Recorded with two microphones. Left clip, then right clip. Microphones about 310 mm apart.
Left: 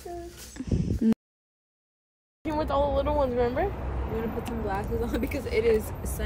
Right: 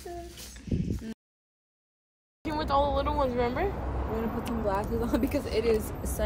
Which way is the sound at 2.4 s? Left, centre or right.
Centre.